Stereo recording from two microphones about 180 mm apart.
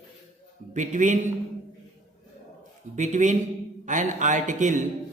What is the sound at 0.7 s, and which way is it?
Speech, 45° right (ahead or behind).